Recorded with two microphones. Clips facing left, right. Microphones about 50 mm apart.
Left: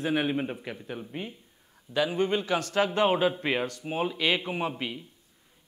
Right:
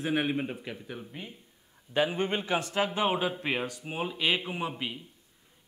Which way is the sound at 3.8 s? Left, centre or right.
Centre.